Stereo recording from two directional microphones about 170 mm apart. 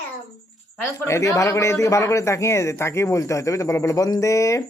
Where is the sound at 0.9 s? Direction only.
15° left (ahead or behind).